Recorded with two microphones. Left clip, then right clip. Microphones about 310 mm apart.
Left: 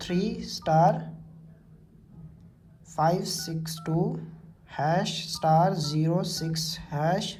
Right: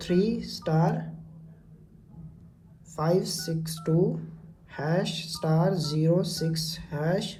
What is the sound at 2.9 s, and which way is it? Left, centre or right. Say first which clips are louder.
Speech: left 1 dB; left.